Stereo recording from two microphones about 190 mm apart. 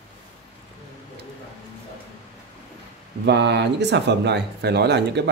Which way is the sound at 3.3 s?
65° right (ahead or behind).